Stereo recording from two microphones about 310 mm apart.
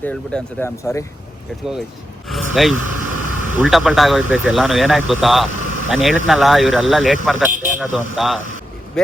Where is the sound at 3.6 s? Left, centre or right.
Centre.